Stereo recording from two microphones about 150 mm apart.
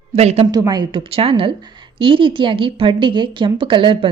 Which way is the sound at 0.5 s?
25° right (ahead or behind).